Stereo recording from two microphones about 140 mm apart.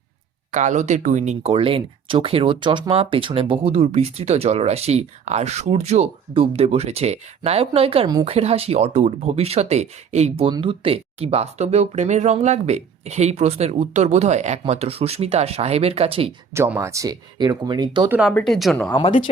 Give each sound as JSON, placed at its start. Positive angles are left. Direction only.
{"t": 0.5, "sound": "speech", "side_deg": -60}
{"t": 8.0, "sound": "a woman's voice", "side_deg": -30}
{"t": 8.3, "sound": "speech", "side_deg": -45}
{"t": 16.6, "sound": "speech", "side_deg": -15}
{"t": 18.3, "sound": "speech", "side_deg": 5}